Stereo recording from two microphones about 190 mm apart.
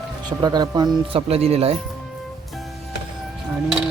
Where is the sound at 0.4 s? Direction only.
20° right (ahead or behind).